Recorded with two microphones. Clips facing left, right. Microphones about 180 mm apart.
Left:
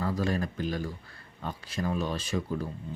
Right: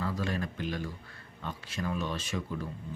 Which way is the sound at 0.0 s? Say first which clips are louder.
Left 4 dB; 40° left (ahead or behind).